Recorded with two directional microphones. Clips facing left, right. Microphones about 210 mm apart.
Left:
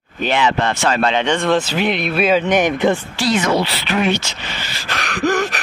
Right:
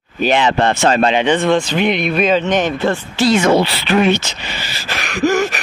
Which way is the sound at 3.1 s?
25° right (ahead or behind).